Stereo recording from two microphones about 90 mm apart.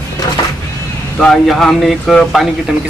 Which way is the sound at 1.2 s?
5° left (ahead or behind).